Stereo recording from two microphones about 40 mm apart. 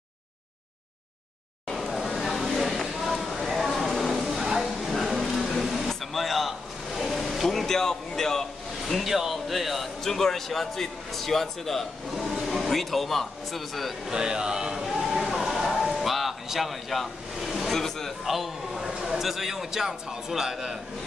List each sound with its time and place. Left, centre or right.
1.7 s a sound: centre
8.8 s a sound: centre
10.0 s a man's voice: centre
12.3 s vehicle: centre
12.5 s a man's voice: centre
14.0 s speech: centre
14.9 s a sound: centre
15.7 s vehicle: centre
17.7 s speech: centre
18.2 s a man's voice: centre